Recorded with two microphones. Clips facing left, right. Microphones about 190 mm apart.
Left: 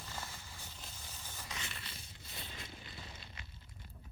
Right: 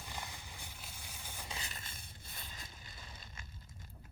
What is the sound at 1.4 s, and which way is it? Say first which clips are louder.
Boat: left 1 dB; 35° right (ahead or behind).